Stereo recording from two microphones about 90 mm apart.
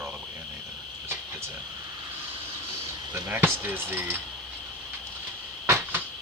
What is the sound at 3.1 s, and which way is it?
Speech, 25° right (ahead or behind).